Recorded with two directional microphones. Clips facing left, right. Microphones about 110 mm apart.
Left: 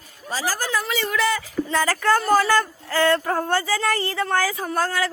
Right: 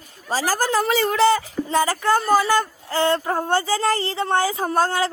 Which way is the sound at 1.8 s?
20° right (ahead or behind).